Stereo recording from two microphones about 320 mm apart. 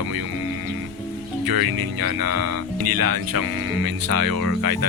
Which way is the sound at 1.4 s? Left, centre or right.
Right.